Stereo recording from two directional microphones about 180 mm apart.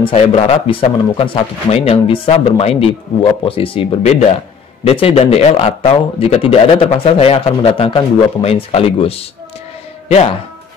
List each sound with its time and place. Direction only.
0.0 s speech: 35° left (ahead or behind)